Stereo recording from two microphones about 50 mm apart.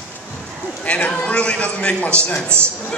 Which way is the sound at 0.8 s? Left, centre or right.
Left.